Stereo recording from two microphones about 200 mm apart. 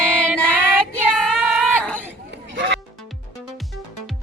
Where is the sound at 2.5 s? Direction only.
60° right (ahead or behind).